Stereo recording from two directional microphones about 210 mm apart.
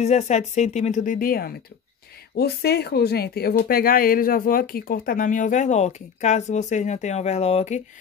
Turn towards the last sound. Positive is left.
turn(degrees=35)  # may be behind; listen again after turning